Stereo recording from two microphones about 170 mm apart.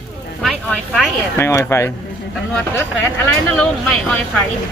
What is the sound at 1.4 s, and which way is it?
Speech, 15° left (ahead or behind).